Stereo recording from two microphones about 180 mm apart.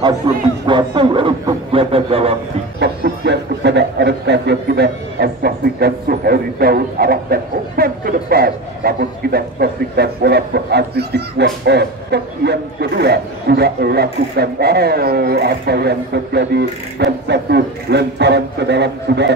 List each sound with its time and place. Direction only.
0.3 s a man's voice: 25° right (ahead or behind)
2.8 s speech: 70° right (ahead or behind)